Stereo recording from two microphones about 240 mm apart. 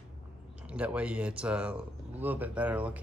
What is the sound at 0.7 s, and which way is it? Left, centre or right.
Speech, centre.